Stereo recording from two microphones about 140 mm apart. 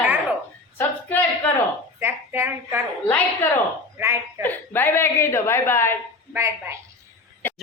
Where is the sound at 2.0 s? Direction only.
15° right (ahead or behind).